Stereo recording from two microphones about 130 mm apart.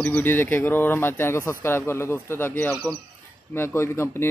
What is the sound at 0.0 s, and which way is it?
Speech, 15° left (ahead or behind).